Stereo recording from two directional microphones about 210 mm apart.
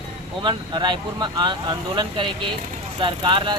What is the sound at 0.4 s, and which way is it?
Speech, 20° right (ahead or behind).